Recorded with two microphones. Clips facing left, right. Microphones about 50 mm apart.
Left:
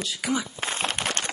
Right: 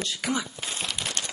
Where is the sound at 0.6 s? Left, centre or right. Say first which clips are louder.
Left 5 dB; left.